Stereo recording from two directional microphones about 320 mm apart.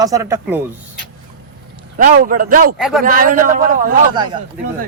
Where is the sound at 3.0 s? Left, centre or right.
Right.